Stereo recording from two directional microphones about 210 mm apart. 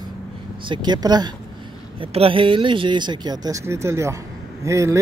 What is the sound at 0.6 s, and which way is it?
Speech, 20° right (ahead or behind).